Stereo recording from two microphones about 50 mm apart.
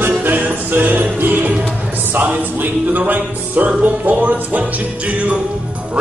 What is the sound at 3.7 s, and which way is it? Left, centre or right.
Speech, right.